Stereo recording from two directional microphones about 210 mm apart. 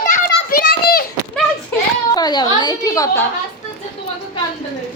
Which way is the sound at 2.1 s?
20° left (ahead or behind).